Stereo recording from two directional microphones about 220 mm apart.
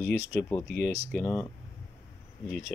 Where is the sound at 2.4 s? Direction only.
Centre (ahead or behind).